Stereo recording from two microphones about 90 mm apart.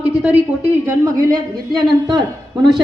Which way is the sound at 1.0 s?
45° right (ahead or behind).